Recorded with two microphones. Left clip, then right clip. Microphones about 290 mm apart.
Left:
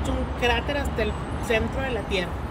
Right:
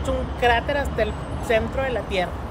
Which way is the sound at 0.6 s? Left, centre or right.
Right.